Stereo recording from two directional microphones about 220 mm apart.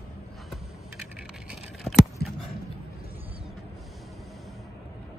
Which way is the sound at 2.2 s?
45° left (ahead or behind).